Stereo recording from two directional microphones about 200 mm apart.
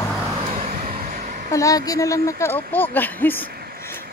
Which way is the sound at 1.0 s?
40° right (ahead or behind).